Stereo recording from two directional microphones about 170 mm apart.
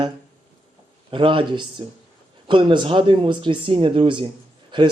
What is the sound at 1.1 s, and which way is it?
A man's voice, 30° right (ahead or behind).